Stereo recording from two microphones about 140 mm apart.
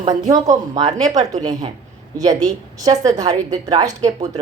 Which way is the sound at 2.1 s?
25° right (ahead or behind).